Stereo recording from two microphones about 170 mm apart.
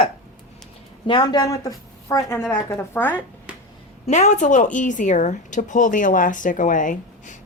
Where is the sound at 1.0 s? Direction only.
25° left (ahead or behind); by 3.2 s 10° left (ahead or behind).